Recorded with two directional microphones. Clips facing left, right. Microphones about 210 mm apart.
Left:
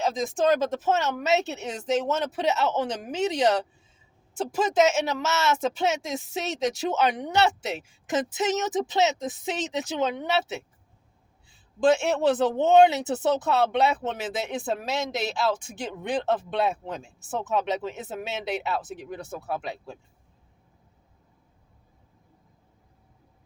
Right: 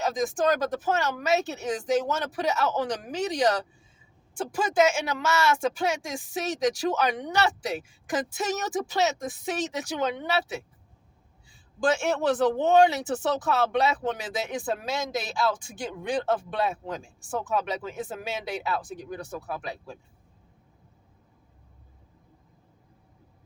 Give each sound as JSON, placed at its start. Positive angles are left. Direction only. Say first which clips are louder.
{"t": 0.0, "sound": "speech", "louder": "left 1 dB", "side_deg": 25}
{"t": 11.9, "sound": "speech", "louder": "left 3 dB", "side_deg": 20}
{"t": 15.1, "sound": "speech", "louder": "left 1 dB", "side_deg": 25}